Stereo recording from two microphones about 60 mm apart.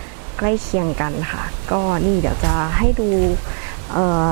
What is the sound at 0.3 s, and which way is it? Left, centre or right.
Speech, right.